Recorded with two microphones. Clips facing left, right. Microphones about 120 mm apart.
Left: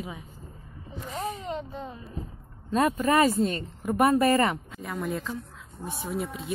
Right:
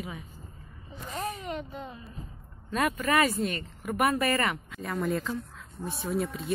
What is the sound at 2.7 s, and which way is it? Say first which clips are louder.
Speech: left 4 dB; 30° left (ahead or behind).